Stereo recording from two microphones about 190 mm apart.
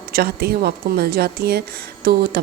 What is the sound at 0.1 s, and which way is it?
A woman's voice, 55° right (ahead or behind).